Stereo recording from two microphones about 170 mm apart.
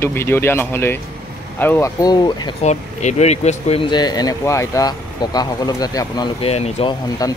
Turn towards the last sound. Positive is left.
turn(degrees=20)  # may be behind; listen again after turning